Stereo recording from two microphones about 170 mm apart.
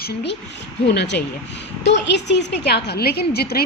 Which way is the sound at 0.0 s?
75° left (ahead or behind).